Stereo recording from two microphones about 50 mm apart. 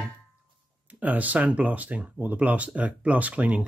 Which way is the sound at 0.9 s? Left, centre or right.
Right.